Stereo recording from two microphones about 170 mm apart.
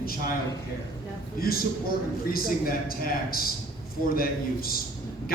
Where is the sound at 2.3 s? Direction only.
60° left (ahead or behind).